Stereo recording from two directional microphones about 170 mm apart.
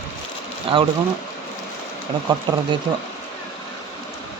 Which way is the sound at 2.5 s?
25° right (ahead or behind).